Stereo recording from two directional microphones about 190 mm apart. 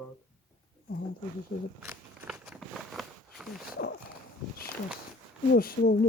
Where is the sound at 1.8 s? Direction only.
15° right (ahead or behind).